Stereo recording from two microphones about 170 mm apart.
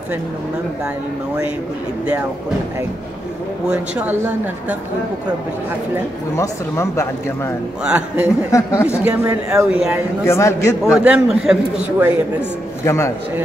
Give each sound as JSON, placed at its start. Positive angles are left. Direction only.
{"t": 3.6, "sound": "speech", "side_deg": -10}
{"t": 6.3, "sound": "speech", "side_deg": 15}
{"t": 7.8, "sound": "speech", "side_deg": -5}
{"t": 8.5, "sound": "speech", "side_deg": 20}
{"t": 9.0, "sound": "speech", "side_deg": -10}
{"t": 10.2, "sound": "speech", "side_deg": 15}
{"t": 10.8, "sound": "a man's voice", "side_deg": -5}
{"t": 12.4, "sound": "speech", "side_deg": 15}